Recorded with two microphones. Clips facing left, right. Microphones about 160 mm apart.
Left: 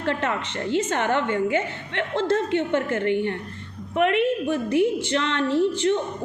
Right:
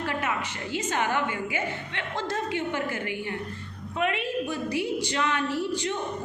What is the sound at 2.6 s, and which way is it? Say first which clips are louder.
A woman's voice: left 6 dB; 60° left (ahead or behind).